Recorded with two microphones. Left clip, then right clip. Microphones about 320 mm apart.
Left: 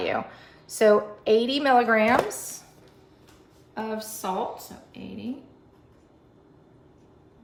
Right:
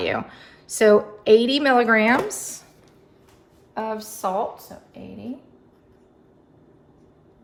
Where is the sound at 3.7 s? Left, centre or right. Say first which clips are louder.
Right 4 dB; centre.